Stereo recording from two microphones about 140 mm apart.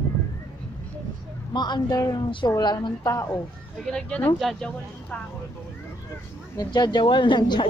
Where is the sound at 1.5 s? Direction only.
30° left (ahead or behind).